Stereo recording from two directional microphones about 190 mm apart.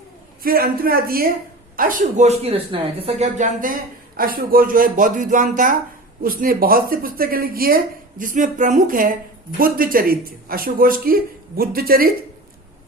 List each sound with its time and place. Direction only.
0.4 s speech: 50° right (ahead or behind)